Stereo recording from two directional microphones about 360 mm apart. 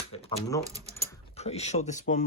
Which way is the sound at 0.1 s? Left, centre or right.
Centre.